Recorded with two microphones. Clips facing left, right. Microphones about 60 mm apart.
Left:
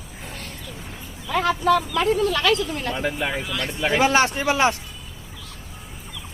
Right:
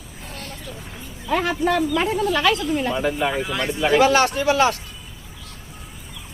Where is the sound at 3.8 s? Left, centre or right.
Centre.